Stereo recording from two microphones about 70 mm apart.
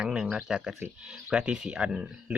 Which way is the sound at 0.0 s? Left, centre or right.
Centre.